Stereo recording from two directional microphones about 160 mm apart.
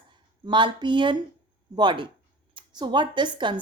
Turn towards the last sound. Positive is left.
turn(degrees=-30)  # may be behind; listen again after turning